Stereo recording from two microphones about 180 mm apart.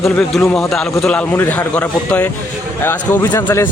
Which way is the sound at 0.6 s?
Centre (ahead or behind).